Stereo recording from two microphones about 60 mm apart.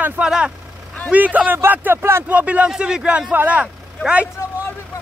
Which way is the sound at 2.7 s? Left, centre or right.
Centre.